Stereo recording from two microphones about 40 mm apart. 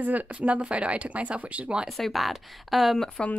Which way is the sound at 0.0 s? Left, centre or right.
Right.